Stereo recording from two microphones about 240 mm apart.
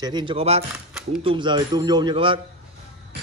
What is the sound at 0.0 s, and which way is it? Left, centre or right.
Speech, centre.